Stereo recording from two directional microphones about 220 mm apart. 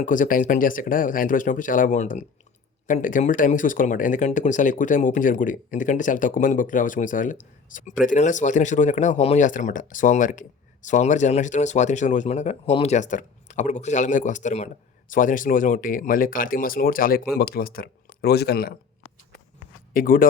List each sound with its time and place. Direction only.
0.0 s speech: 35° left (ahead or behind)
19.9 s speech: 40° left (ahead or behind)